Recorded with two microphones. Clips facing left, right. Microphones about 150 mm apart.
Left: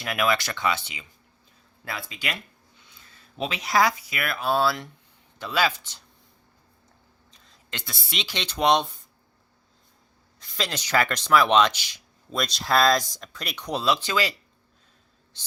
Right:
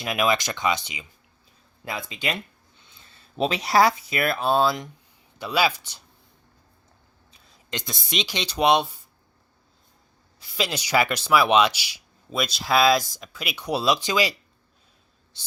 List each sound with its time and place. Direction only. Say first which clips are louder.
0.0 s speech: right 2 dB; 20° right (ahead or behind)
7.3 s speech: right 6 dB; 15° right (ahead or behind)
10.4 s speech: right 3 dB; 10° right (ahead or behind)